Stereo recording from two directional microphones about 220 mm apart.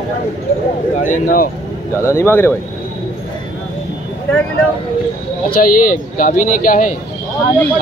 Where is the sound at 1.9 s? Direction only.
10° left (ahead or behind).